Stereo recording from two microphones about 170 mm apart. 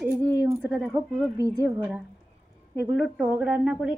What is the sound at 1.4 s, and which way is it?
A woman's voice, 15° right (ahead or behind).